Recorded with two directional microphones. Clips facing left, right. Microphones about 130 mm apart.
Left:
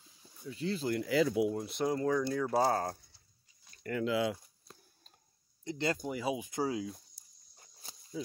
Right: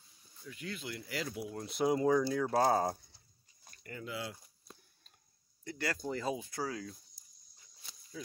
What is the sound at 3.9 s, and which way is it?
Speech, 90° left.